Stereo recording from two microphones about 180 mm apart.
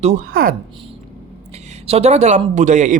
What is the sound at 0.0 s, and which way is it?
Speech, 40° right (ahead or behind).